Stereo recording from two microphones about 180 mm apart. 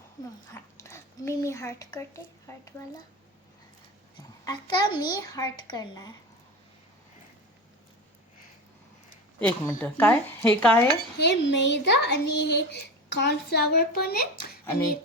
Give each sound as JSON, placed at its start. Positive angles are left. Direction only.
{"t": 0.5, "sound": "a child's voice", "side_deg": 15}
{"t": 4.4, "sound": "a child's voice", "side_deg": 25}
{"t": 9.4, "sound": "speech", "side_deg": 10}
{"t": 11.2, "sound": "speech", "side_deg": 70}